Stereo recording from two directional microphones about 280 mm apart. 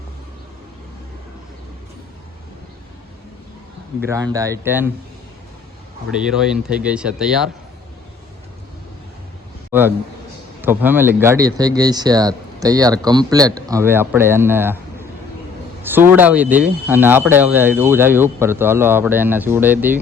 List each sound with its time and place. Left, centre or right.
4.0 s speech: centre
6.1 s speech: centre
9.7 s a man's voice: centre